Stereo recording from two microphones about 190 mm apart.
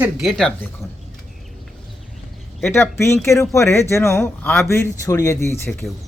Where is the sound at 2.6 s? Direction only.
10° left (ahead or behind).